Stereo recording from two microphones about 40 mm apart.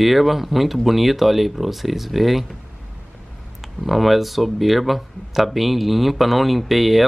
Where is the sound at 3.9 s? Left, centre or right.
Centre.